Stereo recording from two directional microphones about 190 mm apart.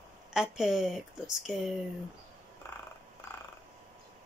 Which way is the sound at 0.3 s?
5° right (ahead or behind).